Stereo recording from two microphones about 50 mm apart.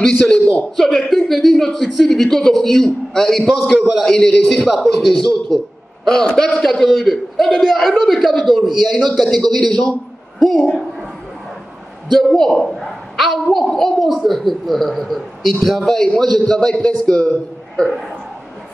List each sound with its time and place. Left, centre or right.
0.0 s a man's voice: centre
4.6 s a woman's voice: centre
9.4 s a man's voice: centre
12.1 s a woman's voice: centre
17.8 s a woman's voice: centre